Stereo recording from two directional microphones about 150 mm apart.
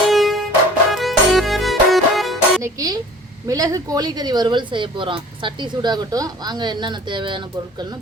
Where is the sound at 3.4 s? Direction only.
25° right (ahead or behind).